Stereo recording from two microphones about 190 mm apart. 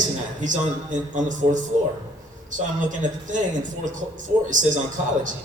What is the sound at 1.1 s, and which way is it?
Speech, 40° right (ahead or behind).